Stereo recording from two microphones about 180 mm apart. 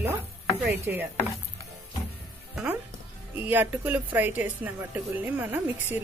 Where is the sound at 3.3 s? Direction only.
10° right (ahead or behind).